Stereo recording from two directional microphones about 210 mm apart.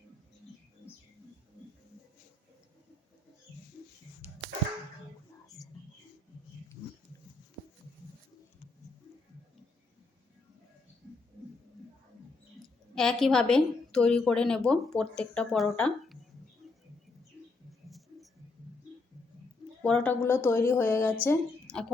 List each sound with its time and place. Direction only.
12.9 s a woman's voice: centre (ahead or behind)
17.8 s a sound: centre (ahead or behind)
19.8 s speech: 5° left (ahead or behind)